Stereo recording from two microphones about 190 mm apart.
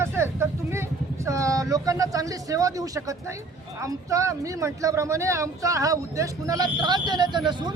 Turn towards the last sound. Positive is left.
turn(degrees=-25)  # may be behind; listen again after turning